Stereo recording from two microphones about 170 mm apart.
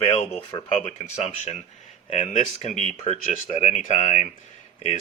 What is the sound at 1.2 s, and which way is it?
Speech, 40° left (ahead or behind).